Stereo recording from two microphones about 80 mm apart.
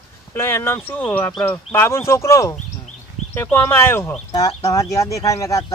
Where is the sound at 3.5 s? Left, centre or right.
Left.